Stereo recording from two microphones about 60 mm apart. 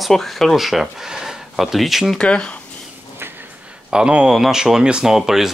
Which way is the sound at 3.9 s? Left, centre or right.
Centre.